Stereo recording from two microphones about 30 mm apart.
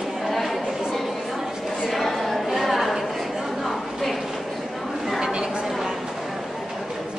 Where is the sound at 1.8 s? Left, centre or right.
Centre.